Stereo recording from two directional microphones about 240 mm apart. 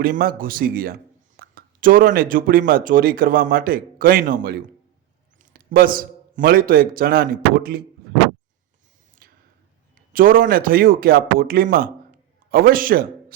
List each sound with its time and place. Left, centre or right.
0.0 s a man's voice: right
9.2 s a sound: right
10.1 s a man's voice: right